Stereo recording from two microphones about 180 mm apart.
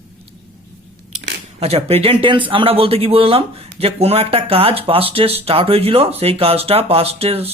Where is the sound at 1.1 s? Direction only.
35° right (ahead or behind).